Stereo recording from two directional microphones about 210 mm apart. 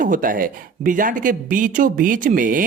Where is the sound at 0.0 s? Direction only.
40° right (ahead or behind).